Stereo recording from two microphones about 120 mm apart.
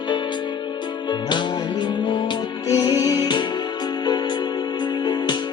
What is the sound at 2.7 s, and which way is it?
Music, 35° left (ahead or behind).